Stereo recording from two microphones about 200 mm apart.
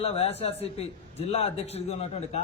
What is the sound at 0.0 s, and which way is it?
A man's voice, 30° left (ahead or behind).